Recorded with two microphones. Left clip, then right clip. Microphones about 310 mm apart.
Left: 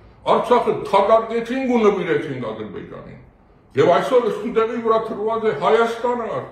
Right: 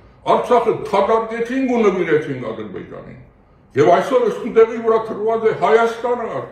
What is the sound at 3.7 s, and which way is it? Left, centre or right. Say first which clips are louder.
A man's voice: right 2 dB; centre.